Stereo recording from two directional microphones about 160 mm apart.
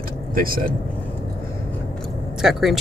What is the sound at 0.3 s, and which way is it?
Speech, 65° right (ahead or behind).